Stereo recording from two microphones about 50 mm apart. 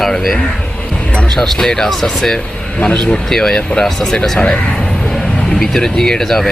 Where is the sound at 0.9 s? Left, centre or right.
Left.